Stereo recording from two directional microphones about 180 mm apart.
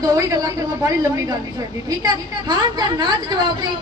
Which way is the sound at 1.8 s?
20° right (ahead or behind).